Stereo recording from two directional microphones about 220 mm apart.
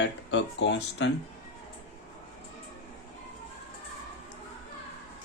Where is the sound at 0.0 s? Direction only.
55° left (ahead or behind).